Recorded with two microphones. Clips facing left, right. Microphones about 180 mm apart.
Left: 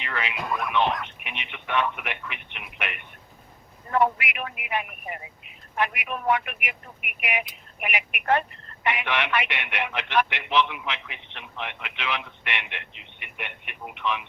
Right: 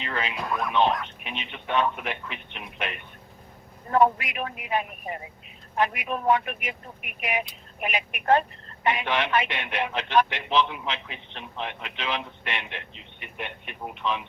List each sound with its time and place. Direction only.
0.0 s speech: 30° right (ahead or behind)
0.3 s speech: centre (ahead or behind)
1.2 s speech: 35° right (ahead or behind)